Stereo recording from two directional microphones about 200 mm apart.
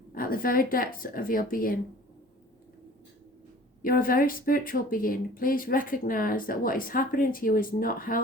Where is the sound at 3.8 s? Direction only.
45° left (ahead or behind).